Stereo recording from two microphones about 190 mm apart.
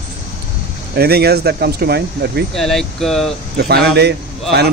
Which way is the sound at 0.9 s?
55° right (ahead or behind).